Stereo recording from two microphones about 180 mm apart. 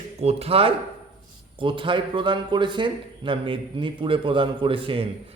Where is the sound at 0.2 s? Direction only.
35° right (ahead or behind).